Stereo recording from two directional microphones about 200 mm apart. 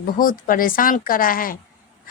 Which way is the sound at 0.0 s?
45° left (ahead or behind).